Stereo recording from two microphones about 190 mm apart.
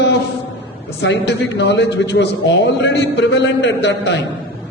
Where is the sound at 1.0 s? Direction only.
65° left (ahead or behind).